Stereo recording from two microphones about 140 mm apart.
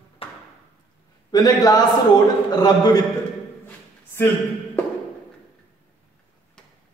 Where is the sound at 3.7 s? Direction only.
15° left (ahead or behind).